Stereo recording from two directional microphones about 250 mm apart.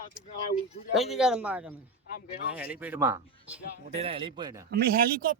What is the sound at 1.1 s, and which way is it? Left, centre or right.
Speech, centre.